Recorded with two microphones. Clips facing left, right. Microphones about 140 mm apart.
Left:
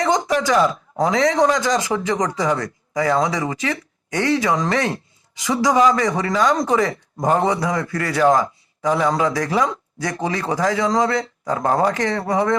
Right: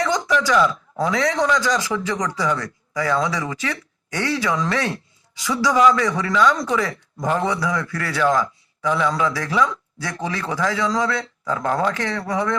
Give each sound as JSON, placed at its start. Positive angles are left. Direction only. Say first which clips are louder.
{"t": 0.0, "sound": "a man's voice", "louder": "left 2 dB", "side_deg": 45}